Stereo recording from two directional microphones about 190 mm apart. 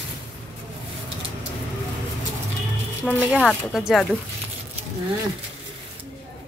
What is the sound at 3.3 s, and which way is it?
Speech, centre (ahead or behind).